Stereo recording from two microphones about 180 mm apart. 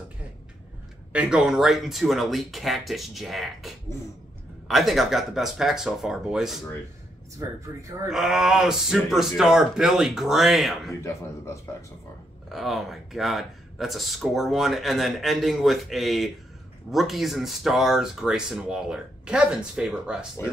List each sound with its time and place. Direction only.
1.1 s speech: 5° right (ahead or behind)
7.3 s speech: 15° right (ahead or behind)
8.1 s speech: centre (ahead or behind)
10.9 s speech: 15° left (ahead or behind)
12.4 s speech: centre (ahead or behind)